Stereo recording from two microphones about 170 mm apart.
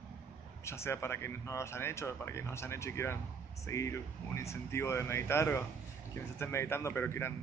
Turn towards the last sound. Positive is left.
turn(degrees=15)  # may be behind; listen again after turning